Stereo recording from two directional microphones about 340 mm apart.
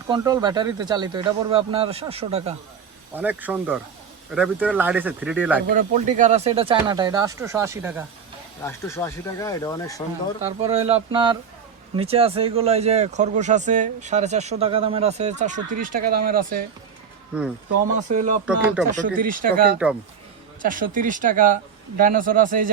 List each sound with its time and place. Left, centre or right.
0.1 s speech: centre
3.2 s speech: centre
5.7 s speech: right; by 8.0 s centre
8.6 s speech: centre
10.4 s speech: centre
17.9 s speech: right
18.4 s speech: centre
19.0 s speech: right